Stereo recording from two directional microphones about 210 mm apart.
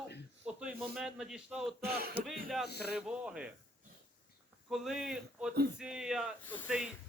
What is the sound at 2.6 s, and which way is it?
Speech, 50° left (ahead or behind).